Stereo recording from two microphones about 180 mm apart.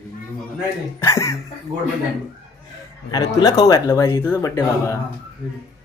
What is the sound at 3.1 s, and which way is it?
Speech, 20° left (ahead or behind).